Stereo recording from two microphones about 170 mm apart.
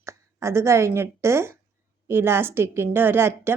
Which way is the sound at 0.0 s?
15° right (ahead or behind).